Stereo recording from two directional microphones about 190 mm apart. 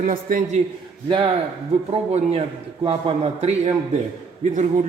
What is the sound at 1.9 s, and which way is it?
A man's voice, 35° right (ahead or behind).